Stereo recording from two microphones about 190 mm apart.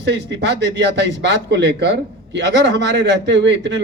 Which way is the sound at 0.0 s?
65° right (ahead or behind).